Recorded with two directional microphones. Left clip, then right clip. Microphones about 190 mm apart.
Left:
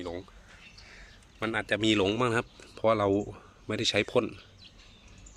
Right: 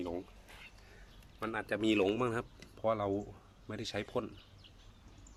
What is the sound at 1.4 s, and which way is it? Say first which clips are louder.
Speech: left 7 dB; centre (ahead or behind).